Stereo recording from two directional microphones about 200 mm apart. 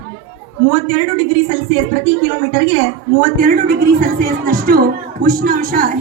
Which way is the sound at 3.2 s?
40° right (ahead or behind).